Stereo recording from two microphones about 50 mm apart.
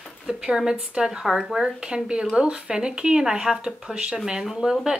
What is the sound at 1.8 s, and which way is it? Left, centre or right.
A woman's voice, centre.